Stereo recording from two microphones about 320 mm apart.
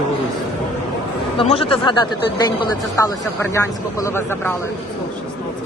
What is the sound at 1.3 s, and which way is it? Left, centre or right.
Speech, centre.